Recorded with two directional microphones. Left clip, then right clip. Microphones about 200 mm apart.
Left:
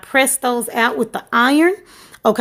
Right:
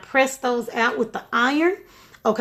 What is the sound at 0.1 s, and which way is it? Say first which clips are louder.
Speech: left 4 dB; 45° left (ahead or behind).